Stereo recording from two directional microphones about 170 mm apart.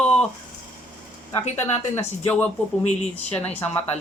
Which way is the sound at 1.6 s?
15° left (ahead or behind).